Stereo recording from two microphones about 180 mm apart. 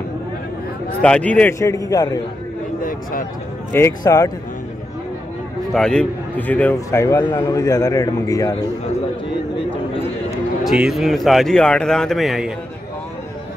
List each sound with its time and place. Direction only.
1.0 s a man's voice: 5° left (ahead or behind)
2.8 s a sound: 50° left (ahead or behind)
3.7 s a man's voice: 15° left (ahead or behind)
5.7 s a man's voice: 5° left (ahead or behind)
10.6 s a man's voice: centre (ahead or behind)